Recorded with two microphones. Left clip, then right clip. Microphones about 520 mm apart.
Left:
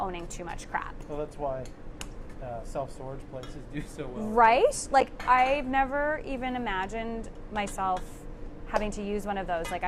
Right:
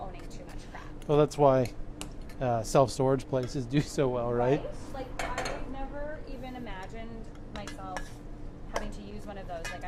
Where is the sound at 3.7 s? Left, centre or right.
Right.